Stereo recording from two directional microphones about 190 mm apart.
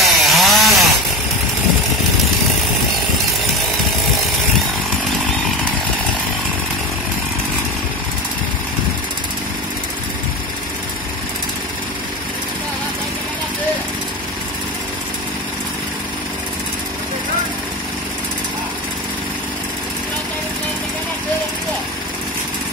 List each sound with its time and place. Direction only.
0.0 s chainsaw: centre (ahead or behind)